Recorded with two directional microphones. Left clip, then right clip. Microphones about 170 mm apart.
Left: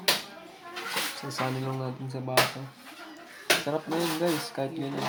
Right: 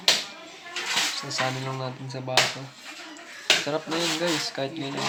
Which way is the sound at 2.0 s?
15° left (ahead or behind).